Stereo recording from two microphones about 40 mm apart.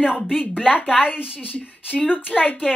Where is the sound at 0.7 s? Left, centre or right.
Left.